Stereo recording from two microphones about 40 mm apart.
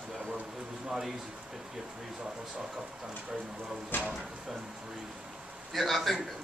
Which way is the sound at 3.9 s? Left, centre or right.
Left.